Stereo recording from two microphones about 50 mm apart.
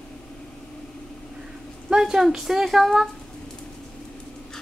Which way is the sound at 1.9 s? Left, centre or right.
Centre.